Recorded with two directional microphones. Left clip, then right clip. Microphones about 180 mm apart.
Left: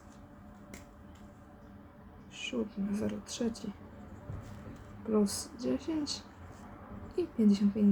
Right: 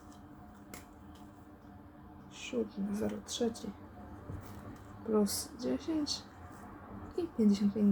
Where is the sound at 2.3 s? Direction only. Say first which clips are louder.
Even; 25° left (ahead or behind).